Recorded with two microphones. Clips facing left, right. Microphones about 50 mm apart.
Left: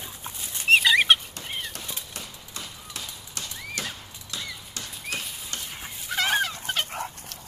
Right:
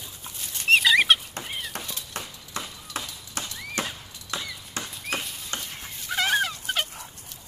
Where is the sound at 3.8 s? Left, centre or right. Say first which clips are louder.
Right 4 dB; right.